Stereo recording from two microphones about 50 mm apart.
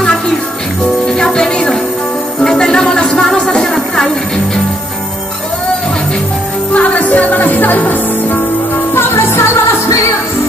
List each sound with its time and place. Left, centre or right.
1.0 s music: centre
6.7 s music: left
8.9 s music: left